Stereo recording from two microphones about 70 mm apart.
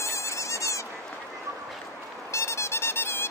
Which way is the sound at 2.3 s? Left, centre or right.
Left.